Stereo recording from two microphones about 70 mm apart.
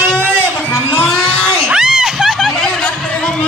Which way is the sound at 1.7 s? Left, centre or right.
Centre.